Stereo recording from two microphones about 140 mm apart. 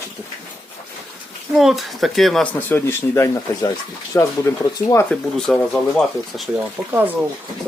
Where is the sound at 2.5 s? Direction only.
15° left (ahead or behind).